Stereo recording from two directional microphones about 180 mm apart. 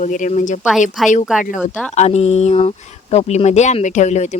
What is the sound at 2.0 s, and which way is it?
Speech, 35° left (ahead or behind).